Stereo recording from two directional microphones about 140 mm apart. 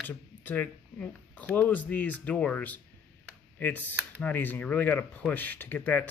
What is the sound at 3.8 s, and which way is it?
Speech, 10° right (ahead or behind).